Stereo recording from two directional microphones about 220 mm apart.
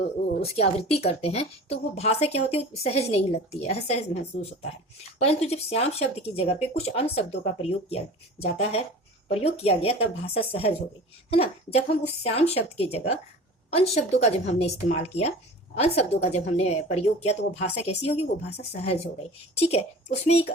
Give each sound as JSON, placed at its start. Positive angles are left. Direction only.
{"t": 0.4, "sound": "speech", "side_deg": 30}
{"t": 5.2, "sound": "speech", "side_deg": 30}